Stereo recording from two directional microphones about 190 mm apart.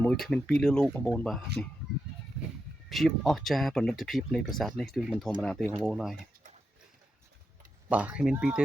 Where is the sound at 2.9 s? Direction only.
Centre (ahead or behind).